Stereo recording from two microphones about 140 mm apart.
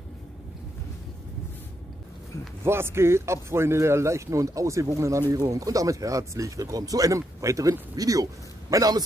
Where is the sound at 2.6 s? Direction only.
15° right (ahead or behind).